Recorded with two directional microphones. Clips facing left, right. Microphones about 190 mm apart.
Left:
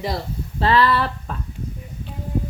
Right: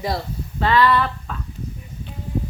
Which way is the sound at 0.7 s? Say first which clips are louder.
Right 1 dB; 35° left (ahead or behind).